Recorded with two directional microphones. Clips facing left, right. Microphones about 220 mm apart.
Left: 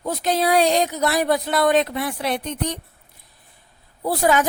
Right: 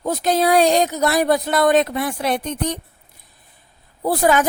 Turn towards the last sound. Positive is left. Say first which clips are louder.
# right 2 dB
turn(degrees=-50)  # may be behind; listen again after turning